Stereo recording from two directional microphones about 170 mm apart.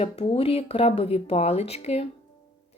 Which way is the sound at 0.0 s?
35° left (ahead or behind).